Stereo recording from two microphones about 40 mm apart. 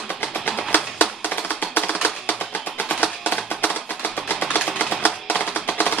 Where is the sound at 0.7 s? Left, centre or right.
Left.